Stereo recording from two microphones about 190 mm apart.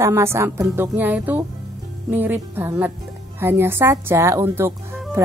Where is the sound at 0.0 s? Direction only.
15° right (ahead or behind).